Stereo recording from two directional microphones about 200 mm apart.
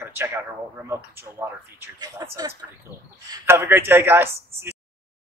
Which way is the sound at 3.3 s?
10° right (ahead or behind).